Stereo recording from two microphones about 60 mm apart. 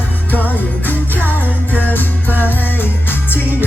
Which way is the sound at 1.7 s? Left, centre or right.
Left.